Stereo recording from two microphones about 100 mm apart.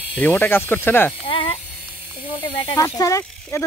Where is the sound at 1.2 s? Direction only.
60° left (ahead or behind).